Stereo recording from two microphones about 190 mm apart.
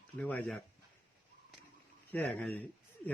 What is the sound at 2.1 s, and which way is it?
Speech, 5° left (ahead or behind).